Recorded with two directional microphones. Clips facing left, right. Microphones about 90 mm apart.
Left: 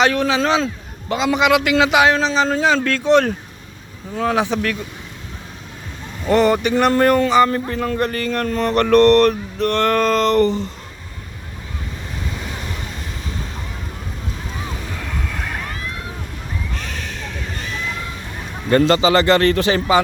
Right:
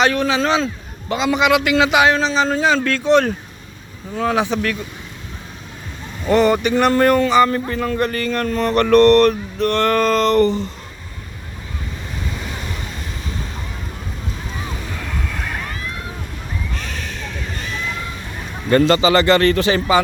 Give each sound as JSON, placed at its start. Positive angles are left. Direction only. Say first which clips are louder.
{"t": 0.2, "sound": "speech", "louder": "even", "side_deg": 90}
{"t": 1.1, "sound": "a man's voice", "louder": "even", "side_deg": 60}
{"t": 4.1, "sound": "speech", "louder": "even", "side_deg": 45}
{"t": 6.2, "sound": "a man's voice", "louder": "even", "side_deg": 50}
{"t": 9.0, "sound": "a sound", "louder": "right 1 dB", "side_deg": 20}
{"t": 15.3, "sound": "slosh", "louder": "even", "side_deg": 10}
{"t": 16.7, "sound": "a sound", "louder": "even", "side_deg": 15}
{"t": 17.6, "sound": "a sound", "louder": "right 1 dB", "side_deg": 0}
{"t": 18.7, "sound": "a man's voice", "louder": "even", "side_deg": 30}